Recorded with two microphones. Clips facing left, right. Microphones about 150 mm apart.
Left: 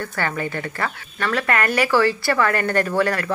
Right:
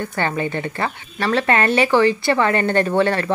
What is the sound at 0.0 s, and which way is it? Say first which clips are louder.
Speech: right 3 dB; 20° right (ahead or behind).